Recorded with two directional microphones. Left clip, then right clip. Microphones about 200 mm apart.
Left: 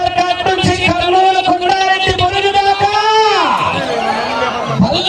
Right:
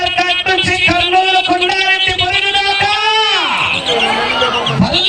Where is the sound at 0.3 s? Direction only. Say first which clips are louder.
Right 1 dB; 35° left (ahead or behind).